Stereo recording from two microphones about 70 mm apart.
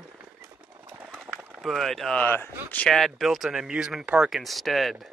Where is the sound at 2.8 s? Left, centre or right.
Centre.